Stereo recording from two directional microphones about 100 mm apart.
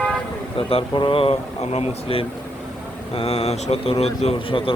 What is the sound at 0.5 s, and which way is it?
A man's voice, 60° left (ahead or behind).